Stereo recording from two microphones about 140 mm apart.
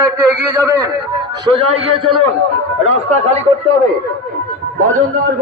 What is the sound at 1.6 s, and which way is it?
Speech, 45° right (ahead or behind).